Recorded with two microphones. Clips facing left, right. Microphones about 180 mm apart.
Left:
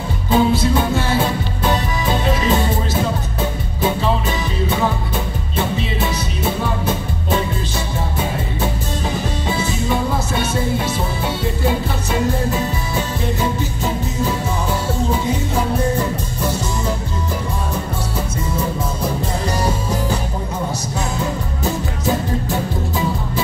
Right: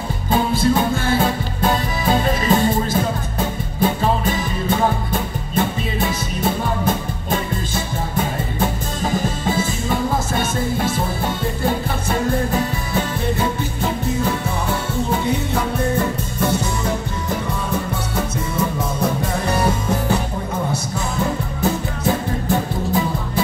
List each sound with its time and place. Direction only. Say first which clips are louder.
0.3 s music: left 2 dB; 50° right (ahead or behind)
5.8 s music: left 1 dB; 50° right (ahead or behind)
9.5 s music: left 1 dB; 50° right (ahead or behind)